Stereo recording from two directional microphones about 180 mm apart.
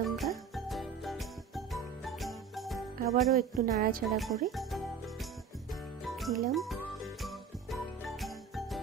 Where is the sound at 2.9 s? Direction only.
55° right (ahead or behind).